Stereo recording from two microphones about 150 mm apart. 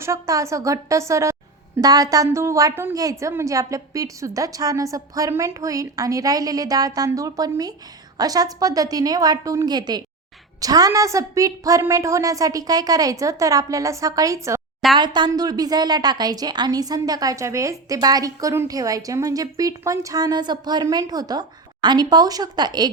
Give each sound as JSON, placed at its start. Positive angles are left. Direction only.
{"t": 0.0, "sound": "a woman's voice", "side_deg": -20}
{"t": 14.9, "sound": "a woman's voice", "side_deg": -30}